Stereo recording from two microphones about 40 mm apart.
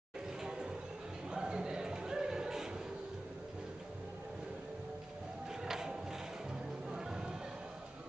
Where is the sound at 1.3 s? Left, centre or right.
Right.